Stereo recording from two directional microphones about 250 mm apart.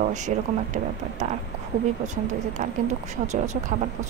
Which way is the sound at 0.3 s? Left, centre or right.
Right.